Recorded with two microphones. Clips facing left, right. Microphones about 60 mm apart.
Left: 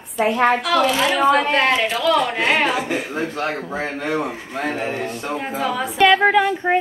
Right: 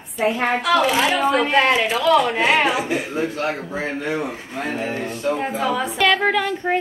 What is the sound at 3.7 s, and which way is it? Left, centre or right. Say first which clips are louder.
Speech: even; left.